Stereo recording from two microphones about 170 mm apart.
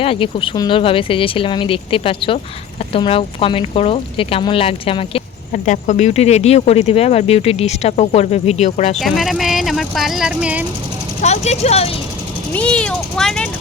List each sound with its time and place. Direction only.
0.0 s speech: 30° left (ahead or behind)
5.5 s speech: 50° left (ahead or behind)
9.0 s speech: centre (ahead or behind)
11.2 s speech: 40° left (ahead or behind)
12.5 s speech: 5° left (ahead or behind)